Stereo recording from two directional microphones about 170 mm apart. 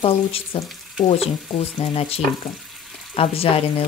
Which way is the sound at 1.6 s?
35° left (ahead or behind).